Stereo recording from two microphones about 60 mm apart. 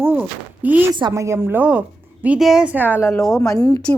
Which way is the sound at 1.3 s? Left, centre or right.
Right.